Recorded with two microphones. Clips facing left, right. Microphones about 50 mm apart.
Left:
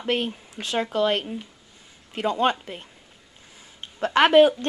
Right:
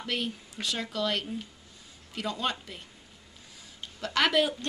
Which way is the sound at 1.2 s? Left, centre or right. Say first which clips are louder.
Left 3 dB; left.